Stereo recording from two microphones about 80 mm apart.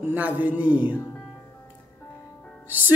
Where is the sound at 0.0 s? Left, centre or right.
Centre.